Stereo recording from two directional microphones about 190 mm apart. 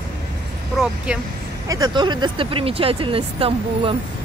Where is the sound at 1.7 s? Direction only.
20° right (ahead or behind).